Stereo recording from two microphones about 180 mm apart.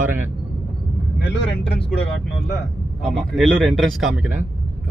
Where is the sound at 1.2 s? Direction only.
70° left (ahead or behind).